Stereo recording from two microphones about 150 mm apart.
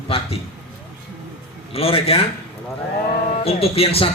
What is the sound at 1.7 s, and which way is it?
Speech, 40° left (ahead or behind).